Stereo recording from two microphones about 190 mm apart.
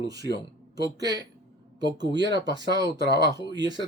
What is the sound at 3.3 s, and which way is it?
Speech, 20° right (ahead or behind).